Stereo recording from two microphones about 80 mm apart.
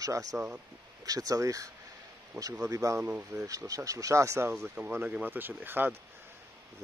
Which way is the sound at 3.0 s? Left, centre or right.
Right.